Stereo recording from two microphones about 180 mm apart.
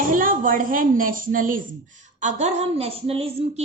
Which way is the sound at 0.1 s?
50° right (ahead or behind).